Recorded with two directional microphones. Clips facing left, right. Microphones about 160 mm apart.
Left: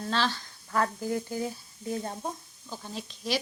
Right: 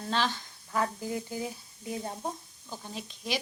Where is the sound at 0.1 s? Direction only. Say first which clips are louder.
Even; 15° right (ahead or behind).